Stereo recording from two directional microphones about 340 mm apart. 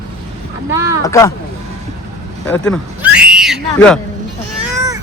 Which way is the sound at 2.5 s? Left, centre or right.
Centre.